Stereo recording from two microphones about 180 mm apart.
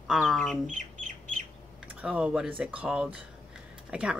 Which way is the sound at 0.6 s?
45° right (ahead or behind).